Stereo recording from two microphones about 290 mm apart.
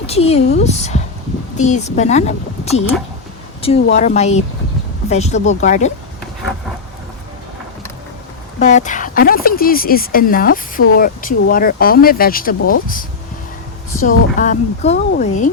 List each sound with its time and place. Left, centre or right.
0.0 s speech: left
3.9 s speech: left
8.5 s speech: left
14.0 s speech: left